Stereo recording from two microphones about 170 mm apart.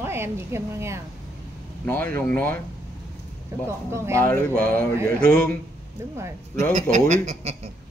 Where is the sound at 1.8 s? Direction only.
10° left (ahead or behind).